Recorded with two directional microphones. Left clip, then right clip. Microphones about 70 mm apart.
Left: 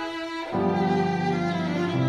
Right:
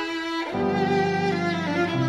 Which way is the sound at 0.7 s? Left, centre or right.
Left.